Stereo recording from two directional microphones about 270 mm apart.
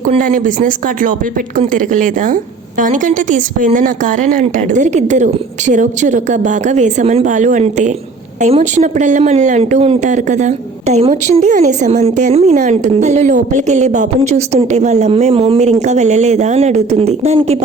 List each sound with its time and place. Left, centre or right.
0.0 s speech: right